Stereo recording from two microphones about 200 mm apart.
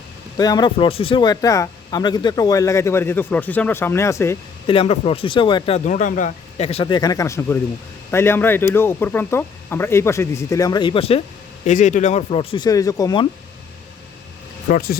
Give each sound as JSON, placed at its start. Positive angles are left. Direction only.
{"t": 0.3, "sound": "speech", "side_deg": 20}
{"t": 4.6, "sound": "speech", "side_deg": 25}
{"t": 14.7, "sound": "speech", "side_deg": 50}